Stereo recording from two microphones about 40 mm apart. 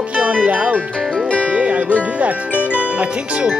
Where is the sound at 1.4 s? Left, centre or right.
Right.